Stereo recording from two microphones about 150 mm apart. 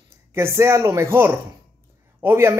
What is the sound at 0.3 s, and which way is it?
A man's voice, 15° right (ahead or behind).